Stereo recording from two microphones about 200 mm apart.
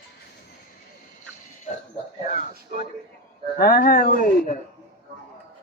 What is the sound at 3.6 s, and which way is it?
Speech, 50° left (ahead or behind).